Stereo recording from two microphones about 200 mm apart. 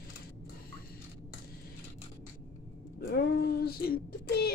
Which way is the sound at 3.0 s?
50° left (ahead or behind).